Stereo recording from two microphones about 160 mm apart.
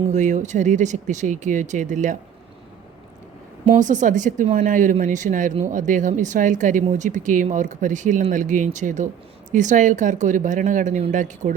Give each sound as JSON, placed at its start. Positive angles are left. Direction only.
{"t": 0.1, "sound": "speech", "side_deg": -50}
{"t": 3.8, "sound": "speech", "side_deg": -50}